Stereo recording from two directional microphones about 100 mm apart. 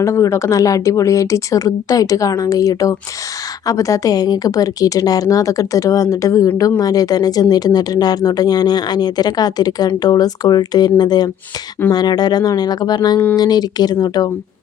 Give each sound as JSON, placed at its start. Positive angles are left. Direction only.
{"t": 0.0, "sound": "speech", "side_deg": 30}